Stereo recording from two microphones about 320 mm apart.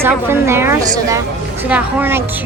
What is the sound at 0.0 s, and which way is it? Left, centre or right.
A woman's voice, centre.